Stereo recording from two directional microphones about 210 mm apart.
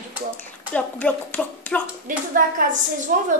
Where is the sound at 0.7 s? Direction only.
5° left (ahead or behind).